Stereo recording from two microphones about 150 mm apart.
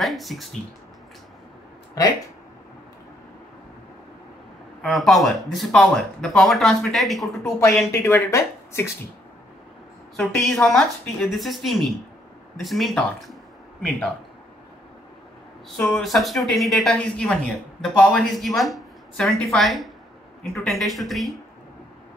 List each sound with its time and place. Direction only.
0.0 s speech: centre (ahead or behind)
4.8 s speech: centre (ahead or behind)
7.9 s speech: 20° left (ahead or behind)
10.1 s speech: 10° left (ahead or behind)
15.9 s speech: centre (ahead or behind)